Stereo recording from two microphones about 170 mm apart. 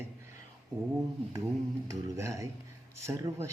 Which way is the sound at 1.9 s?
20° right (ahead or behind).